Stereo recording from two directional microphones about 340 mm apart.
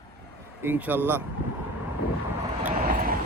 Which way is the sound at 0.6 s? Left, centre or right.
Centre.